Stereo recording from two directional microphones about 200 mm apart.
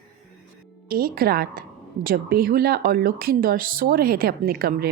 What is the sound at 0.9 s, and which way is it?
A woman's voice, 50° right (ahead or behind).